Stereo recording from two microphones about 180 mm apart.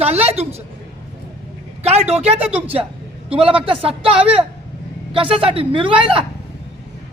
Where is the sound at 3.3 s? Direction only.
30° right (ahead or behind).